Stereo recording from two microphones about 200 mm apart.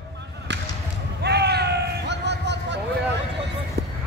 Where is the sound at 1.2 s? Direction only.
55° right (ahead or behind).